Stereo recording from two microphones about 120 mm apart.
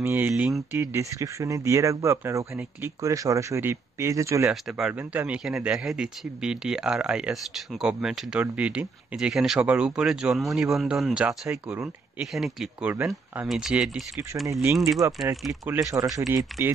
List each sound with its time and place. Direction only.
0.0 s speech: 15° right (ahead or behind)
4.5 s speech: 5° right (ahead or behind)
12.9 s speech: 20° right (ahead or behind)
13.5 s speech: 5° right (ahead or behind)
14.5 s speech: 20° right (ahead or behind)